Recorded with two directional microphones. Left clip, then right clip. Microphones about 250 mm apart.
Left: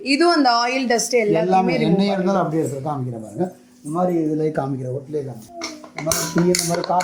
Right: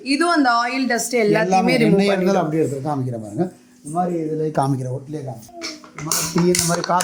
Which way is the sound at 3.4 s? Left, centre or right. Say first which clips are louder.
Even; right.